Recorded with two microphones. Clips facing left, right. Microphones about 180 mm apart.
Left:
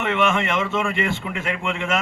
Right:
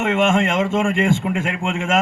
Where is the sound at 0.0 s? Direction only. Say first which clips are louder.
Right 4 dB; 45° right (ahead or behind).